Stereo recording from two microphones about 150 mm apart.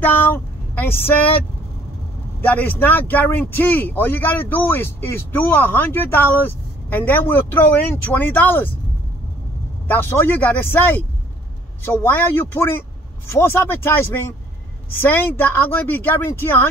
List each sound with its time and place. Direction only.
0.0 s speech: 15° left (ahead or behind)
2.4 s speech: 10° left (ahead or behind)
9.8 s speech: 15° left (ahead or behind)